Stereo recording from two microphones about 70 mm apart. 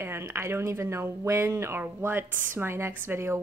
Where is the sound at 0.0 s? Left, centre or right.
Right.